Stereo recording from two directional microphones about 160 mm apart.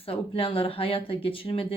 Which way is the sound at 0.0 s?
35° left (ahead or behind).